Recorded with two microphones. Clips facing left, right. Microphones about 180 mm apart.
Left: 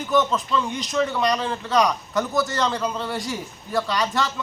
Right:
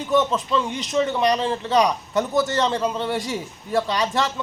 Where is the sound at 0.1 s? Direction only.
25° right (ahead or behind).